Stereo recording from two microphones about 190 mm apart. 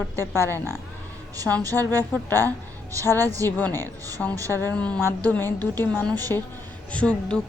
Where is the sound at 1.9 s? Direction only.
10° left (ahead or behind).